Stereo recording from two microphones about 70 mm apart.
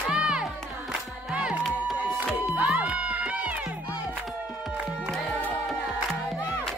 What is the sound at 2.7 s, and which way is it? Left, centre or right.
Run, centre.